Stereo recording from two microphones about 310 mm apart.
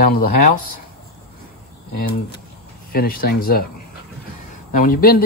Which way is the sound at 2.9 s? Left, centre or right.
Left.